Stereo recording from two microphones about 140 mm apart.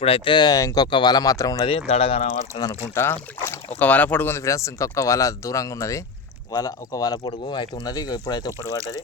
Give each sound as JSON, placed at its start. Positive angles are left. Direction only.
{"t": 0.0, "sound": "speech", "side_deg": 40}
{"t": 1.6, "sound": "speech", "side_deg": 45}
{"t": 2.6, "sound": "speech", "side_deg": 25}